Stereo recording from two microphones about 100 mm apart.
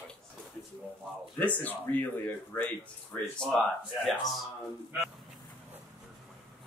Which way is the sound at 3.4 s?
5° left (ahead or behind).